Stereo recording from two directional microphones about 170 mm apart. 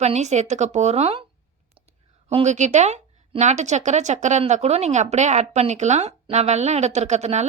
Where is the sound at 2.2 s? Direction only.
40° right (ahead or behind).